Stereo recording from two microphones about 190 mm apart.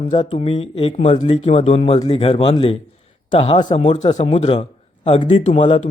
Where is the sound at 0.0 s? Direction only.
30° left (ahead or behind).